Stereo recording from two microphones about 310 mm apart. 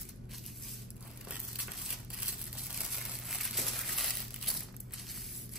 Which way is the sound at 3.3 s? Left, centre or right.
Centre.